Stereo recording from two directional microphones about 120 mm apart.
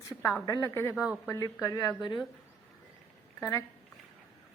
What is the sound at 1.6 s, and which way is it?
Speech, 30° left (ahead or behind).